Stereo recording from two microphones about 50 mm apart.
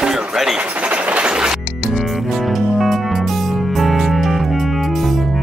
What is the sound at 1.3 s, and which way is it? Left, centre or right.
Music, centre.